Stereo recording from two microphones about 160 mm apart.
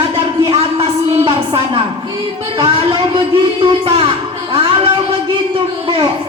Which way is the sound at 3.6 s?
35° right (ahead or behind).